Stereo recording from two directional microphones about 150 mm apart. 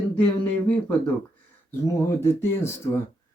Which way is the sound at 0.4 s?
10° left (ahead or behind).